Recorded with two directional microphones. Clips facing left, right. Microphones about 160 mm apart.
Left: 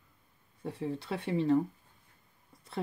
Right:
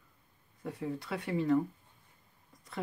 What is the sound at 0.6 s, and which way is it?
Speech, 30° left (ahead or behind).